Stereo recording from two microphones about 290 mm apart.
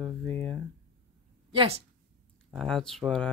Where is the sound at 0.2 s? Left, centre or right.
Centre.